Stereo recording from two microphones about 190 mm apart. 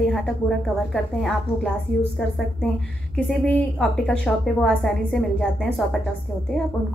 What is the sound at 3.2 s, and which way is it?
A woman's voice, 5° left (ahead or behind).